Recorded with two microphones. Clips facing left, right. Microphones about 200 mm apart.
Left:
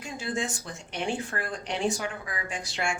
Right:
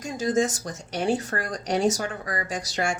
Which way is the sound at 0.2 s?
40° right (ahead or behind).